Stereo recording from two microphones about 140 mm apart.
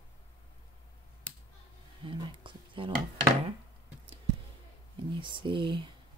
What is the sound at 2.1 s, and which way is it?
Speech, 35° right (ahead or behind).